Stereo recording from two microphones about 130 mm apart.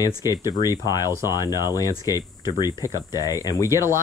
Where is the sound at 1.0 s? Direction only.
20° right (ahead or behind).